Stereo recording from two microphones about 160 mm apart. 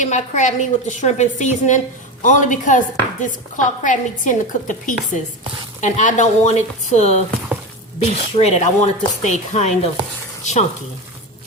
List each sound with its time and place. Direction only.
0.0 s speech: 50° left (ahead or behind)